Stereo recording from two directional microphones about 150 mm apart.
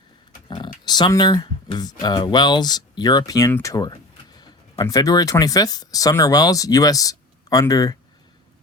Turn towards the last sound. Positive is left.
turn(degrees=25)  # may be behind; listen again after turning